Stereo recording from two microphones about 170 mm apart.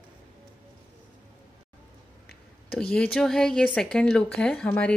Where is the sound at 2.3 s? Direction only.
65° left (ahead or behind).